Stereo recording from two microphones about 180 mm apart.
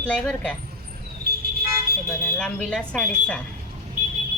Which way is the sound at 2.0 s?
10° left (ahead or behind).